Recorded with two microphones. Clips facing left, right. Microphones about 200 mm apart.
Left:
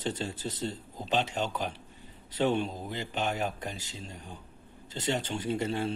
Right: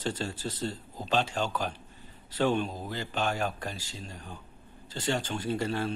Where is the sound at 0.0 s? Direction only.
20° left (ahead or behind).